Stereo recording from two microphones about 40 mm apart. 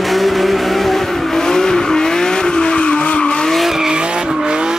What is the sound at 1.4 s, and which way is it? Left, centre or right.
Vehicle, centre.